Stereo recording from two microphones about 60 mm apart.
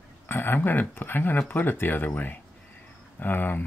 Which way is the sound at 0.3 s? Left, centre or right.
Left.